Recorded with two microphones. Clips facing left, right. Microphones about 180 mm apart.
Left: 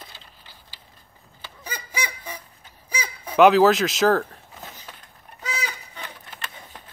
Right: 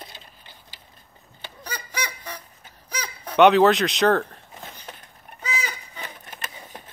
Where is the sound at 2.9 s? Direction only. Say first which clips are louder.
Left 1 dB; 5° left (ahead or behind).